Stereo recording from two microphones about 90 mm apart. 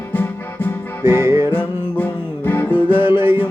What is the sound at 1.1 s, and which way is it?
Music, 30° right (ahead or behind).